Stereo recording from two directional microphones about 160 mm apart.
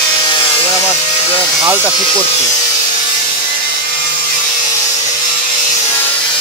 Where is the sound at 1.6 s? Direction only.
5° right (ahead or behind).